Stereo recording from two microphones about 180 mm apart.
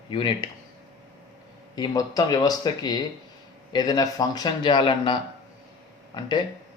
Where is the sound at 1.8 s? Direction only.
20° left (ahead or behind).